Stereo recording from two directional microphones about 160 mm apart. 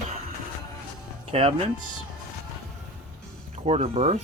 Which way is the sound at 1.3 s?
35° right (ahead or behind).